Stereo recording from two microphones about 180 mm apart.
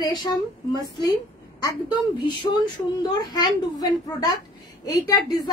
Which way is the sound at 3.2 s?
20° left (ahead or behind).